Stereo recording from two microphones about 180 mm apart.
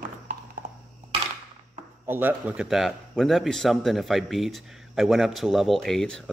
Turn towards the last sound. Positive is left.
turn(degrees=5)  # may be behind; listen again after turning